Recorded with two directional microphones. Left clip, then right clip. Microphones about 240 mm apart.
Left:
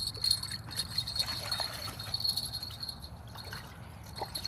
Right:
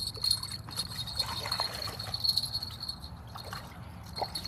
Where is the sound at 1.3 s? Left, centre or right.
Right.